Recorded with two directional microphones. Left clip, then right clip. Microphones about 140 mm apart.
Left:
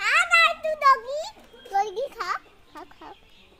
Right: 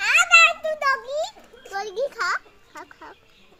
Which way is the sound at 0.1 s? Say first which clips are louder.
Right 4 dB; 20° right (ahead or behind).